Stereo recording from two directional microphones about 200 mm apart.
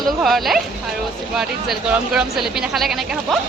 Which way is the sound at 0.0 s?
Centre (ahead or behind).